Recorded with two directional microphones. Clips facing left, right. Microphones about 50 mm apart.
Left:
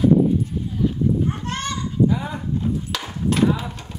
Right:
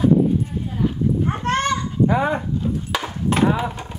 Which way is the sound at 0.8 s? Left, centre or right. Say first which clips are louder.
Even; right.